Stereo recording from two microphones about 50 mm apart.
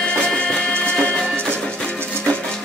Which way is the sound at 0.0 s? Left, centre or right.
Centre.